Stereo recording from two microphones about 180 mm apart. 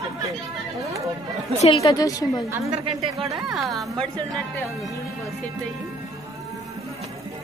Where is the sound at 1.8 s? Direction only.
20° left (ahead or behind).